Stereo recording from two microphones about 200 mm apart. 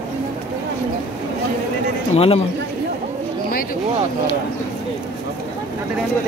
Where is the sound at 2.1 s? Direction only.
30° left (ahead or behind).